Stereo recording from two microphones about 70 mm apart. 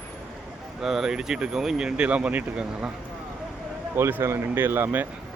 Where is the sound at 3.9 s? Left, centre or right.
Right.